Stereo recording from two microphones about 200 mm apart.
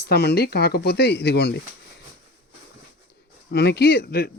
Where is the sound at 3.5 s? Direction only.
55° left (ahead or behind).